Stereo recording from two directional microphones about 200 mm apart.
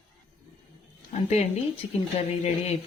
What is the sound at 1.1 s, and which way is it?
Speech, 35° left (ahead or behind).